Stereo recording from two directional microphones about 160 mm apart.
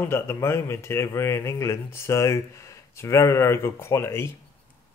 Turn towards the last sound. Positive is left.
turn(degrees=15)  # may be behind; listen again after turning